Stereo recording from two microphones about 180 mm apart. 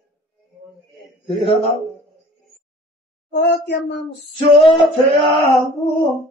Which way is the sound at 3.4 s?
65° left (ahead or behind).